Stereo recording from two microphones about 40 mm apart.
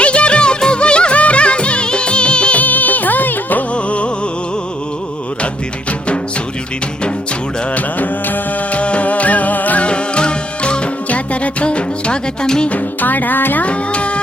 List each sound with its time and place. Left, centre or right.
0.0 s music: left
2.6 s music: left
3.7 s music: left
7.7 s music: left
8.8 s music: left
9.8 s music: left
11.1 s music: left; by 12.6 s centre
12.6 s music: left
13.7 s music: left